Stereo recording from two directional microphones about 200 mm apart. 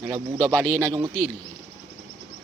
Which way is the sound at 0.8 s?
20° right (ahead or behind).